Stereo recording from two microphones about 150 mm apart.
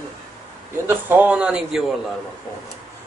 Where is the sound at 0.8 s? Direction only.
10° right (ahead or behind).